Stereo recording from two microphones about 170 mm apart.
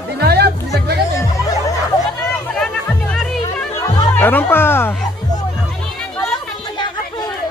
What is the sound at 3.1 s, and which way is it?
Music, 5° left (ahead or behind).